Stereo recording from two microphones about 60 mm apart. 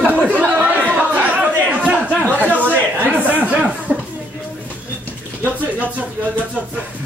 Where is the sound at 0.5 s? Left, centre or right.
Right.